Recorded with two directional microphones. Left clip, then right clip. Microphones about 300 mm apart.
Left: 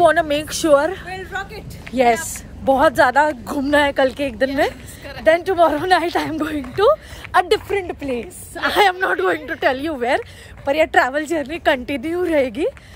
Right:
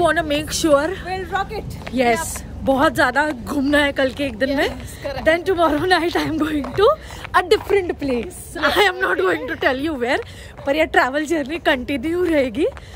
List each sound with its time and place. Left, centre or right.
0.0 s speech: centre
1.0 s a woman's voice: centre
2.6 s speech: centre
4.6 s a woman's voice: centre
5.2 s speech: centre